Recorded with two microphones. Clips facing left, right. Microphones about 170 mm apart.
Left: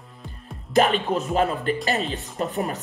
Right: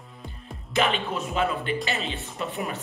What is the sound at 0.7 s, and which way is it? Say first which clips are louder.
Speech: left 5 dB; 40° left (ahead or behind).